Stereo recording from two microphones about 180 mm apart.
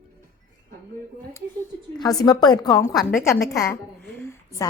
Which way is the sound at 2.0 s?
20° left (ahead or behind).